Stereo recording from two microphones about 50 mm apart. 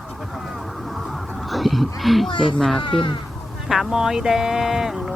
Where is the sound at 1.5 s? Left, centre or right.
Centre.